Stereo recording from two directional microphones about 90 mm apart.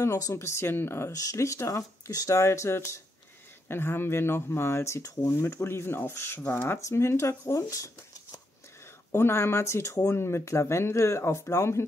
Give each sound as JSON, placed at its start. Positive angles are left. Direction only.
{"t": 0.0, "sound": "speech", "side_deg": 30}
{"t": 1.1, "sound": "speech", "side_deg": 40}